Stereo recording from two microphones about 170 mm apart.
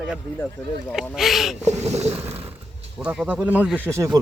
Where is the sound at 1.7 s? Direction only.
40° right (ahead or behind).